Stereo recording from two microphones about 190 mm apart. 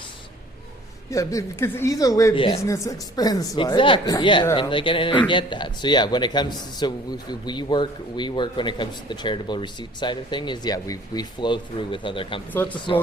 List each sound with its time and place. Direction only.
1.1 s a man's voice: 15° left (ahead or behind)
12.6 s speech: 10° left (ahead or behind)